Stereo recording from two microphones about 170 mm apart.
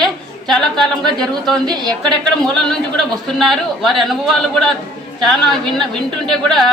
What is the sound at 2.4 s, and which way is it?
A man's voice, 5° left (ahead or behind).